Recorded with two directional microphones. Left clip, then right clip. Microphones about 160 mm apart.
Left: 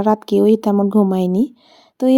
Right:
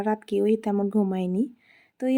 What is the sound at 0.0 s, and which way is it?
Speech, 30° left (ahead or behind).